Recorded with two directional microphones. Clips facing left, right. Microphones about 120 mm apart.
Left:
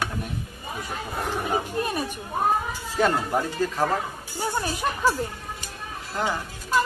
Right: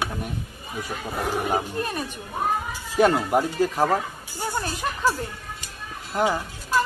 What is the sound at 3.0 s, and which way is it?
Speech, 15° right (ahead or behind).